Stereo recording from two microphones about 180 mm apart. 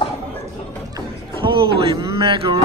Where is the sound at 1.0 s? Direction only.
25° right (ahead or behind).